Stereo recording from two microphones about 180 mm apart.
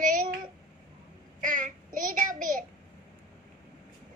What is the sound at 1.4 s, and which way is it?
Child singing, 45° right (ahead or behind).